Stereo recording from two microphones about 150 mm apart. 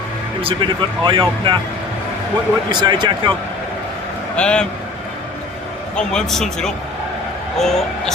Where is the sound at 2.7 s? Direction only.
30° right (ahead or behind).